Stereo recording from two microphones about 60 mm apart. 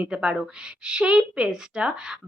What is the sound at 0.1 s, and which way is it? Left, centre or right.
Speech, centre.